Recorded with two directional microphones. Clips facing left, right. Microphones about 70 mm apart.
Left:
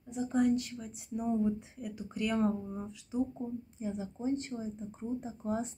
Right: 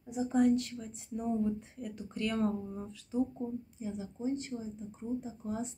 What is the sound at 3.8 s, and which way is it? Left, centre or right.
Speech, left.